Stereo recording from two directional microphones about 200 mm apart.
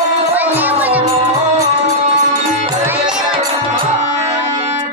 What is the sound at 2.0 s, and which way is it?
Music, 30° right (ahead or behind).